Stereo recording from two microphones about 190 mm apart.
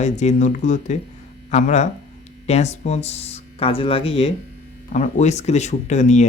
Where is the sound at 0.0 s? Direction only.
35° left (ahead or behind).